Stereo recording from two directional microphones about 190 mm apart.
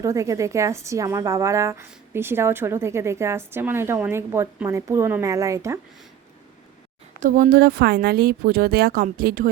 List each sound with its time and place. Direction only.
0.0 s a woman's voice: 15° right (ahead or behind)
7.2 s speech: 45° right (ahead or behind)